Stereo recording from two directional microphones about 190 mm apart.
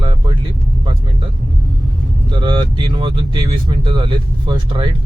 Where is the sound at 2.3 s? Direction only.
25° right (ahead or behind).